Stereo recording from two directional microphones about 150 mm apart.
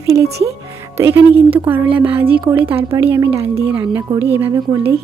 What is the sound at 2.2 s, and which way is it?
Speech, 35° right (ahead or behind).